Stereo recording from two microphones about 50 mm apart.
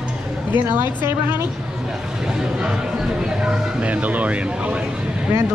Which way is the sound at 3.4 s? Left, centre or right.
Right.